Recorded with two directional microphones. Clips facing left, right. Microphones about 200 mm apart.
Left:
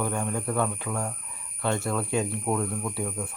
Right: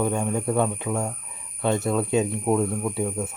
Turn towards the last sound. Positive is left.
turn(degrees=-20)  # may be behind; listen again after turning